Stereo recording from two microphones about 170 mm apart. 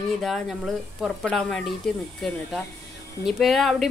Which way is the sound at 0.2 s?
Centre (ahead or behind).